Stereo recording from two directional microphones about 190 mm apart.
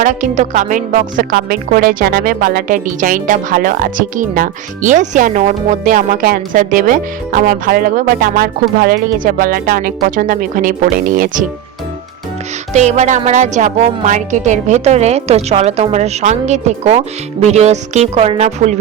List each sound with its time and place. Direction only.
0.0 s speech: 40° right (ahead or behind)
12.7 s speech: 35° right (ahead or behind)